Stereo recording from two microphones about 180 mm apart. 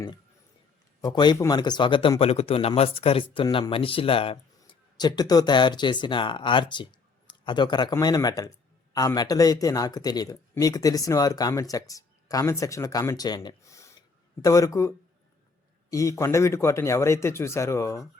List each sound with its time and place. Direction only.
1.0 s a man's voice: 25° left (ahead or behind)